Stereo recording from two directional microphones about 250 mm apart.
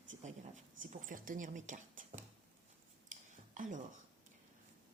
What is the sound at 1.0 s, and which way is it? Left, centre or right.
Speech, right.